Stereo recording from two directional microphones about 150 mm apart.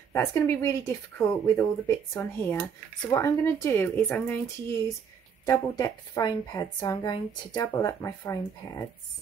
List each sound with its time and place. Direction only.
0.1 s speech: 20° left (ahead or behind)
5.4 s a woman's voice: 20° left (ahead or behind)